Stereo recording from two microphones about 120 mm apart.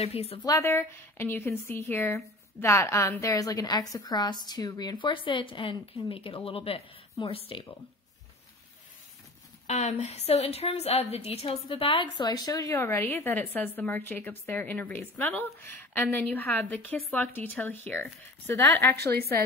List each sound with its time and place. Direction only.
0.0 s a woman's voice: 60° left (ahead or behind)
0.5 s a woman's voice: 25° left (ahead or behind); by 7.6 s 50° left (ahead or behind)
9.7 s a woman's voice: 70° left (ahead or behind); by 12.1 s 50° left (ahead or behind)
12.2 s a woman's voice: 30° left (ahead or behind)